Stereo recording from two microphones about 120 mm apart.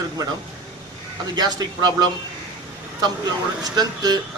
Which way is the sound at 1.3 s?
35° right (ahead or behind).